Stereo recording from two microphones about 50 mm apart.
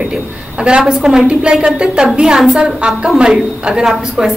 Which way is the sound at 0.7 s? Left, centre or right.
Centre.